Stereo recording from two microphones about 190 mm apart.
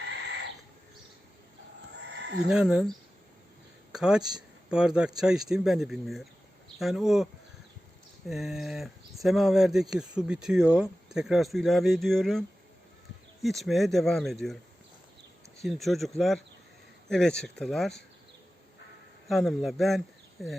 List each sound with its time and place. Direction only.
2.0 s a sound: 60° right (ahead or behind)
2.5 s a man's voice: 5° right (ahead or behind)
3.9 s a man's voice: 5° right (ahead or behind)
8.3 s a man's voice: centre (ahead or behind)
15.6 s a man's voice: centre (ahead or behind)
19.3 s a man's voice: centre (ahead or behind)